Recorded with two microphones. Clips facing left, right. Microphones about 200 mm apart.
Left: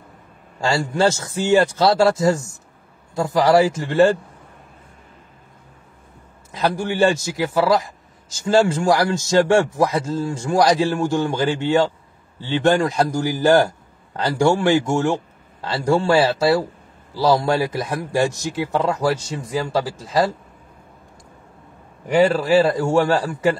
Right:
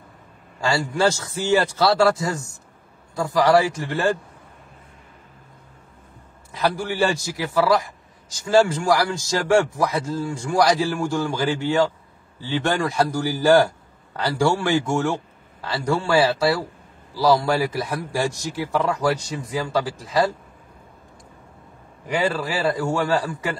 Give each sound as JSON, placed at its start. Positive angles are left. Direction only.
{"t": 0.6, "sound": "a man's voice", "side_deg": 25}
{"t": 6.5, "sound": "a man's voice", "side_deg": 20}
{"t": 22.3, "sound": "a man's voice", "side_deg": 25}